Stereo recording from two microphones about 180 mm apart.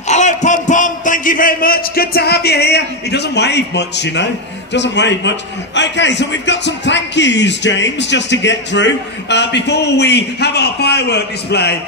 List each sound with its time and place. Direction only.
0.1 s a man's voice: 40° left (ahead or behind); by 11.7 s 65° left (ahead or behind)